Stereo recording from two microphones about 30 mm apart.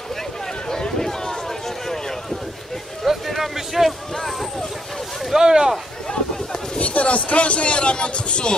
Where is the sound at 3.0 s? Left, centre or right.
Centre.